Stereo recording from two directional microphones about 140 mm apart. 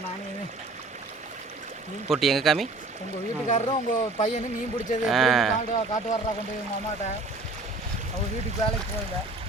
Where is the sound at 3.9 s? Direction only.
65° left (ahead or behind).